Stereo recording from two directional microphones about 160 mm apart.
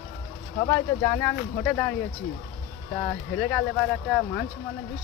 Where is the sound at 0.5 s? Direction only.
20° left (ahead or behind).